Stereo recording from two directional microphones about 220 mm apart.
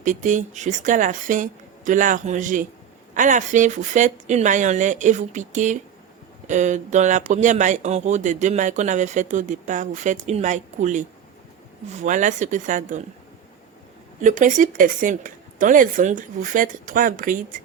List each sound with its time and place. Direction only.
0.0 s speech: 35° right (ahead or behind)
12.0 s speech: 35° right (ahead or behind)
14.2 s speech: 35° right (ahead or behind)